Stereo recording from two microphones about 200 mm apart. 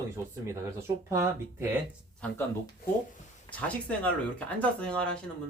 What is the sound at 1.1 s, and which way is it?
Speech, 10° right (ahead or behind).